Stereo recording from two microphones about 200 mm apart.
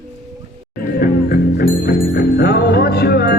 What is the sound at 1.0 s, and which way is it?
Music, 45° left (ahead or behind).